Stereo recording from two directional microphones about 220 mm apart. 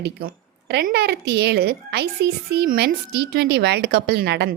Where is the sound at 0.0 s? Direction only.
45° right (ahead or behind).